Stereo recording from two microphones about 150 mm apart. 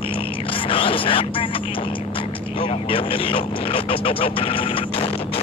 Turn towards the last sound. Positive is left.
turn(degrees=40)  # may be behind; listen again after turning